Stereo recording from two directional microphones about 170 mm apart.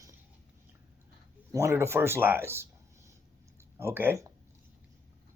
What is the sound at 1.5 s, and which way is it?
A man's voice, 15° right (ahead or behind).